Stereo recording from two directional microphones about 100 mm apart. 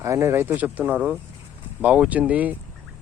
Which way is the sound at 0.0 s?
30° right (ahead or behind).